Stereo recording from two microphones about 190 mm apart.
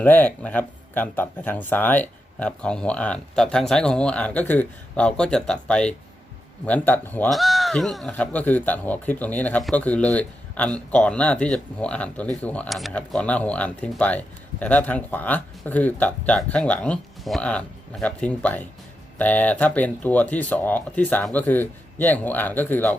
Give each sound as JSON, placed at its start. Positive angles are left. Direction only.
{"t": 0.0, "sound": "speech", "side_deg": 10}